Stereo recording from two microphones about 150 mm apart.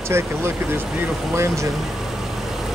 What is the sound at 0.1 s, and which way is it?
Speech, 15° right (ahead or behind).